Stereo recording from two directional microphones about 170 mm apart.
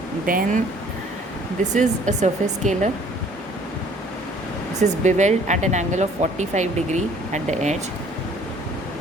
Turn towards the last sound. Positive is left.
turn(degrees=-45)  # may be behind; listen again after turning